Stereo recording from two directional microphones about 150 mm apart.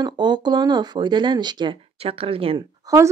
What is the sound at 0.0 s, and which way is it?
Speech, 30° right (ahead or behind).